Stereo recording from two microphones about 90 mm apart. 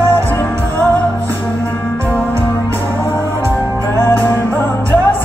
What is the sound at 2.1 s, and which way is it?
Music, 25° left (ahead or behind).